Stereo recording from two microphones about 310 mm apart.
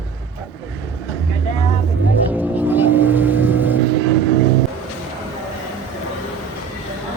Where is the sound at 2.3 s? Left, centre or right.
Centre.